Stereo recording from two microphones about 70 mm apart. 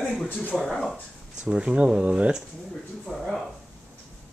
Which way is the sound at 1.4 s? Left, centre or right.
Centre.